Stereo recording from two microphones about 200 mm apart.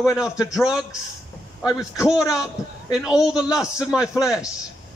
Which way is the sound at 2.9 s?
5° right (ahead or behind).